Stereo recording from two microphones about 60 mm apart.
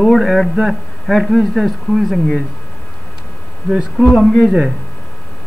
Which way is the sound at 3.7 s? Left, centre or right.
Centre.